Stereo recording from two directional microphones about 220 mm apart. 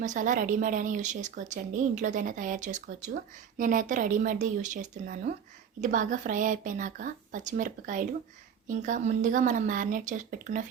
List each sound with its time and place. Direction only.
0.0 s a woman's voice: 35° right (ahead or behind)